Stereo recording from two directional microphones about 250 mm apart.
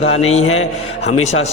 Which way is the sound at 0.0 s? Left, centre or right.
Left.